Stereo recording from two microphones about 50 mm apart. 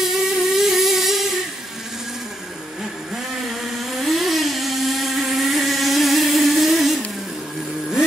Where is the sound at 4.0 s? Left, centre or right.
Centre.